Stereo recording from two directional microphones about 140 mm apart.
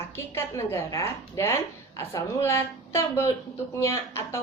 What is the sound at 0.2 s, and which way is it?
A woman's voice, 15° left (ahead or behind).